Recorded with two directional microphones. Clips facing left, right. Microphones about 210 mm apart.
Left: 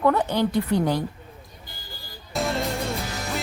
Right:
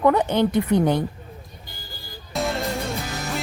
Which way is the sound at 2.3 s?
Centre (ahead or behind).